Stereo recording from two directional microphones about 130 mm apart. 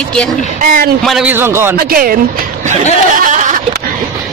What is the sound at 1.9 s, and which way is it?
Speech, 90° right.